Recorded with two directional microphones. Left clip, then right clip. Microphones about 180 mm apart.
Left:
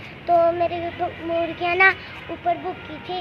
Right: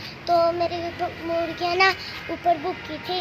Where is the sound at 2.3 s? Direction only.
40° right (ahead or behind).